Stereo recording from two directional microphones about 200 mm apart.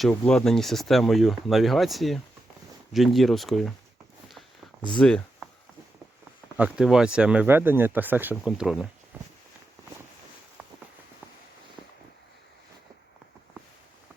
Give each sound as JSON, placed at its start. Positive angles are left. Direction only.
{"t": 0.0, "sound": "speech", "side_deg": 5}
{"t": 4.9, "sound": "speech", "side_deg": 5}
{"t": 6.6, "sound": "speech", "side_deg": -5}
{"t": 9.1, "sound": "a sound", "side_deg": -10}